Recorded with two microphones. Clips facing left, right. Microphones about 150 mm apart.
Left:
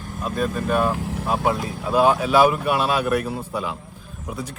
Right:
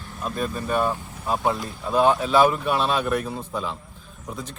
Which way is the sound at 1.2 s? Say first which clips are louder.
Left 1 dB; 5° left (ahead or behind).